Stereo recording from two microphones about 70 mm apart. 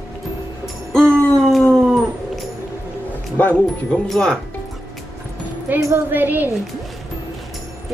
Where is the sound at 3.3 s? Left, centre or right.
Left.